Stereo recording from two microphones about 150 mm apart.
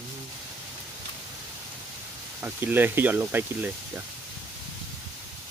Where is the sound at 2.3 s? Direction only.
15° right (ahead or behind).